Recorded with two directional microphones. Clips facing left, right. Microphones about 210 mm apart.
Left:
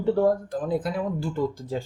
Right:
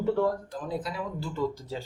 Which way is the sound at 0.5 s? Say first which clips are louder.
Left 7 dB; 50° left (ahead or behind).